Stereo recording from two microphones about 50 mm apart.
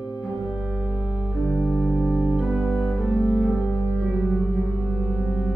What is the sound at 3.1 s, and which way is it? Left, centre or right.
Cello, centre.